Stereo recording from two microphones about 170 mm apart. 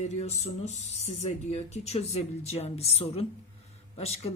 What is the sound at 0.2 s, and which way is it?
Speech, 40° left (ahead or behind).